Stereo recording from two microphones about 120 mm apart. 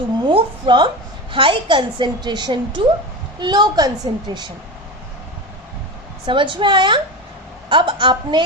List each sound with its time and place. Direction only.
0.3 s a woman's voice: 45° right (ahead or behind)
6.2 s a woman's voice: 45° right (ahead or behind)